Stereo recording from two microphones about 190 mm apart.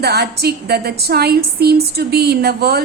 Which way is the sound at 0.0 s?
60° right (ahead or behind).